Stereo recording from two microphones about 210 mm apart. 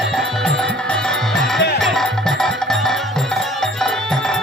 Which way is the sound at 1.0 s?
Centre (ahead or behind).